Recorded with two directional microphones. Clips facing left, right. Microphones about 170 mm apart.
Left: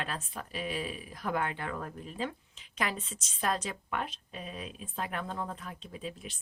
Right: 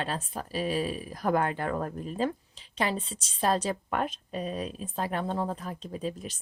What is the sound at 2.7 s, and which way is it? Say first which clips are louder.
A woman's voice: right 5 dB; 30° right (ahead or behind).